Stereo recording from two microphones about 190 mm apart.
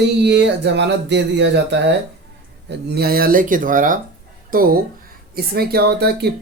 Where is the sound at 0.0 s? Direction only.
65° right (ahead or behind).